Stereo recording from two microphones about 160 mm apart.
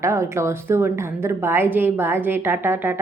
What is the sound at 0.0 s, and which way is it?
Speech, 20° right (ahead or behind).